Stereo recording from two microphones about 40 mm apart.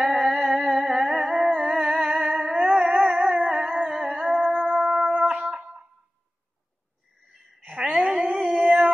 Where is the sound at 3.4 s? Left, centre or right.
Right.